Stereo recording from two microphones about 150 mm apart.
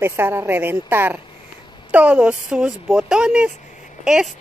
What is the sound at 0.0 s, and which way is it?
A woman's voice, 15° right (ahead or behind).